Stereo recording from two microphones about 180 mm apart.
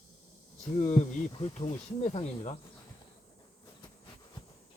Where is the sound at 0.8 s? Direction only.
40° left (ahead or behind).